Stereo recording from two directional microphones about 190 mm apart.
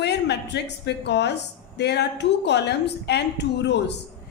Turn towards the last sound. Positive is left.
turn(degrees=65)  # may be behind; listen again after turning